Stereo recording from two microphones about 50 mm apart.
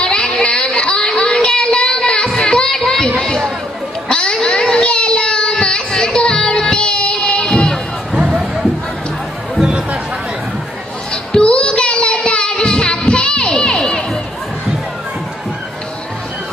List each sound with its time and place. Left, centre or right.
0.0 s child singing: centre
3.2 s chatter: centre
4.1 s child singing: centre
8.1 s music: centre
11.1 s child singing: centre